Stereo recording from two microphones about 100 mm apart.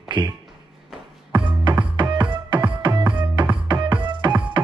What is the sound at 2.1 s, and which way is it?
Music, 50° right (ahead or behind).